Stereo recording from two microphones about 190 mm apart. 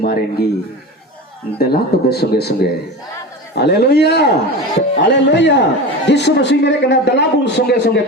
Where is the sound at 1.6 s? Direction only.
55° left (ahead or behind).